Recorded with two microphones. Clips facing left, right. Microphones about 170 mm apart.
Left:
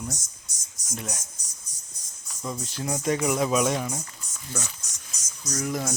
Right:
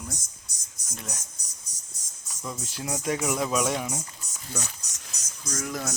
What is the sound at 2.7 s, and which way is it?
Speech, 5° right (ahead or behind).